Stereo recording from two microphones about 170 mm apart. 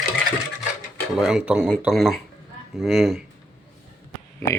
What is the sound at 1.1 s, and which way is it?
Speech, 5° right (ahead or behind).